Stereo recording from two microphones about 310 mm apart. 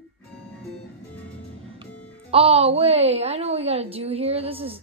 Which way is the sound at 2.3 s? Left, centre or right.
Centre.